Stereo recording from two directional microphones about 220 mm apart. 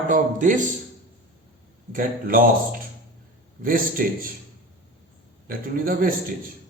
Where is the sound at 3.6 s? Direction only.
40° right (ahead or behind).